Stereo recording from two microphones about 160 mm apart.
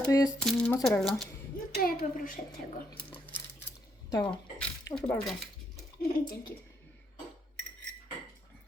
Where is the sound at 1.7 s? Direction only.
65° left (ahead or behind).